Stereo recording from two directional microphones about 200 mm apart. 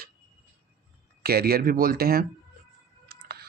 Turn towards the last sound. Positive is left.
turn(degrees=-50)  # may be behind; listen again after turning